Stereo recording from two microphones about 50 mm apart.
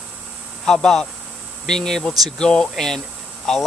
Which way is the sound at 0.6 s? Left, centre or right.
Centre.